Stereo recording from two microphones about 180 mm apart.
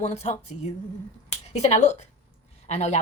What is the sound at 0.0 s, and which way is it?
A woman's voice, 35° left (ahead or behind).